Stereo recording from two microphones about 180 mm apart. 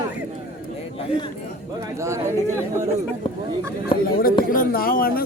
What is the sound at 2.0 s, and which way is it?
Speech, 15° right (ahead or behind).